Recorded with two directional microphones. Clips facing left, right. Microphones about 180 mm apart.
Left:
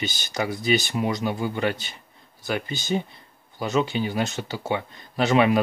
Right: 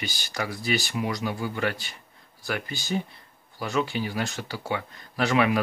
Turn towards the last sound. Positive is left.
turn(degrees=20)  # may be behind; listen again after turning